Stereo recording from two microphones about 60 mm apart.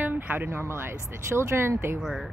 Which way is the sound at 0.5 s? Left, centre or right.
Right.